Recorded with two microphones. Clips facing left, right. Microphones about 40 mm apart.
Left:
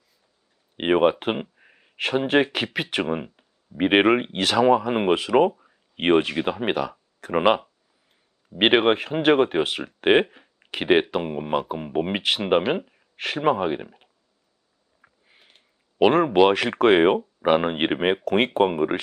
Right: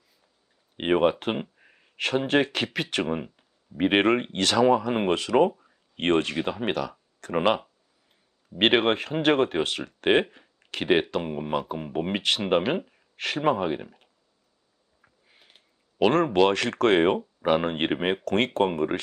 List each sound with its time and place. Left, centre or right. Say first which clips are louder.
0.8 s speech: left 3 dB; centre
15.0 s a sound: left 2 dB; centre
16.0 s speech: left 4 dB; centre